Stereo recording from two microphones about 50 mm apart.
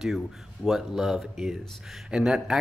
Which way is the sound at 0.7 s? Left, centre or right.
Centre.